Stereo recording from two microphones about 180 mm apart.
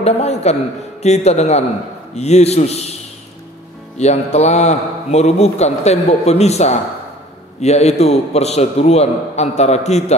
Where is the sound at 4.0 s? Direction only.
40° left (ahead or behind).